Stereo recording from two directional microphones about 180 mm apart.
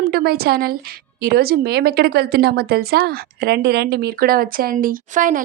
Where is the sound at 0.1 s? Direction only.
60° right (ahead or behind).